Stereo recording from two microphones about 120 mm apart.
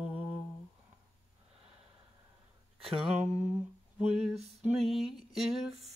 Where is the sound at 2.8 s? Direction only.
55° right (ahead or behind).